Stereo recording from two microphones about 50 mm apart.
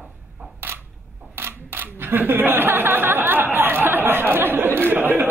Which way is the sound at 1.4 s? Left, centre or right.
Right.